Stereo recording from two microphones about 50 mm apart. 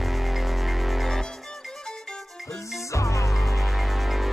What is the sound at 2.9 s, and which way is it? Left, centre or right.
Music, left.